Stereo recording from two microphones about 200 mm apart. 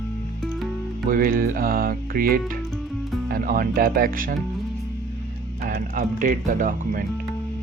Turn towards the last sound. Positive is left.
turn(degrees=-40)  # may be behind; listen again after turning